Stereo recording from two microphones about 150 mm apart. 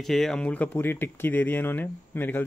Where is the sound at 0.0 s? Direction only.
Centre (ahead or behind).